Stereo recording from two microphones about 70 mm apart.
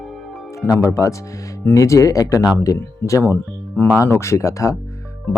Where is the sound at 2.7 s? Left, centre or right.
Left.